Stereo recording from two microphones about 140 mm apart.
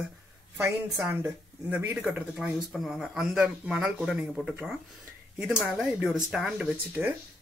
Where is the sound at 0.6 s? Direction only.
15° right (ahead or behind).